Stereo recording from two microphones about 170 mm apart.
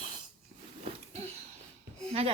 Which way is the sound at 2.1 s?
35° right (ahead or behind).